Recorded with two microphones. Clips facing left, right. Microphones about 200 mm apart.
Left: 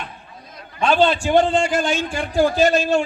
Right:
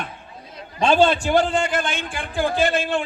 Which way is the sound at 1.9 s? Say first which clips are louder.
Left 7 dB; 55° right (ahead or behind).